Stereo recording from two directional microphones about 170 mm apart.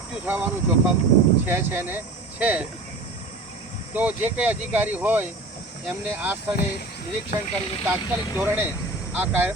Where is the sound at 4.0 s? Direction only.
10° right (ahead or behind).